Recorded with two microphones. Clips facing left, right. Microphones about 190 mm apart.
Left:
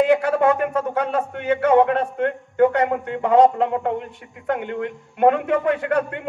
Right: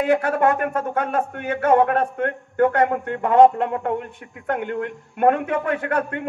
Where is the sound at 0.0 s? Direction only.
50° right (ahead or behind).